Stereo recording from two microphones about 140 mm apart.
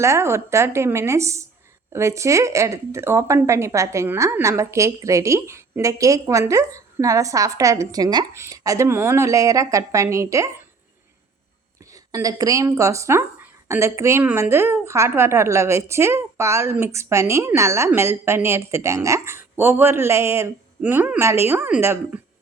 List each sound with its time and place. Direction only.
0.0 s speech: 20° right (ahead or behind)
11.8 s speech: 25° right (ahead or behind)